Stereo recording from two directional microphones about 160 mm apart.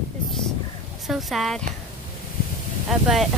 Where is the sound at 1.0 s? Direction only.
Centre (ahead or behind).